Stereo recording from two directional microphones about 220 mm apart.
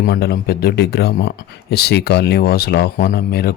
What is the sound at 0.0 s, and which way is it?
Speech, 45° left (ahead or behind).